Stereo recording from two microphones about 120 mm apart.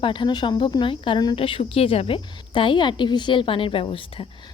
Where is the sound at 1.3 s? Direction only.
50° left (ahead or behind).